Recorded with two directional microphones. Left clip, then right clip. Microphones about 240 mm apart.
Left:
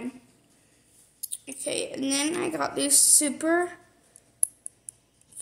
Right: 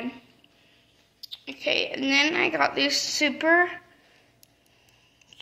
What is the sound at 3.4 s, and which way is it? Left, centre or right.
Speech, left.